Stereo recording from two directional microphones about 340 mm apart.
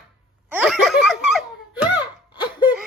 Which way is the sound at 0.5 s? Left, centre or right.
Centre.